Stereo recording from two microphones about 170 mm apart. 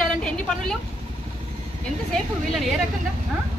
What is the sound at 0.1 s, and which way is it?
Vehicle, 5° left (ahead or behind).